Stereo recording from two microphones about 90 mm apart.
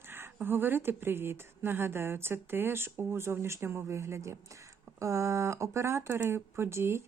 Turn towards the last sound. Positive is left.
turn(degrees=-30)  # may be behind; listen again after turning